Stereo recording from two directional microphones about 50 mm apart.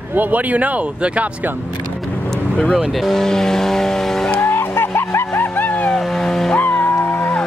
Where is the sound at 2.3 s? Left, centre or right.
Centre.